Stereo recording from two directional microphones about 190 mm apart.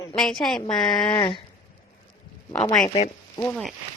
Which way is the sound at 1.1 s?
25° left (ahead or behind).